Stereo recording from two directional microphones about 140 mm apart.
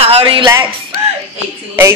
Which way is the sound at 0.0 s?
40° right (ahead or behind).